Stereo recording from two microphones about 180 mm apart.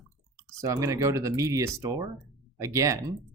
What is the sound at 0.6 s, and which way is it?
Speech, 15° right (ahead or behind).